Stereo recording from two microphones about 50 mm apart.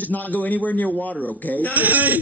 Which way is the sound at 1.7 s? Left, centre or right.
Right.